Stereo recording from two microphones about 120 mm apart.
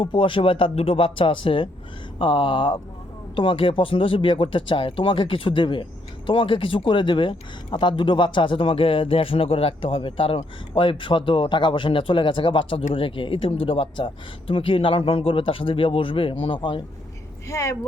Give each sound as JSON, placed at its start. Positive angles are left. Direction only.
{"t": 0.0, "sound": "speech", "side_deg": 45}
{"t": 17.5, "sound": "speech", "side_deg": 25}